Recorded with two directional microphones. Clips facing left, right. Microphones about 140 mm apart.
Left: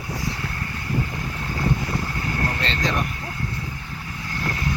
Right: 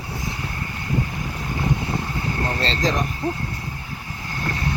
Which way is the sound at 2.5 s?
35° right (ahead or behind).